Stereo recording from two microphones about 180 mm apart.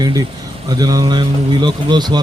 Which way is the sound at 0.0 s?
20° right (ahead or behind).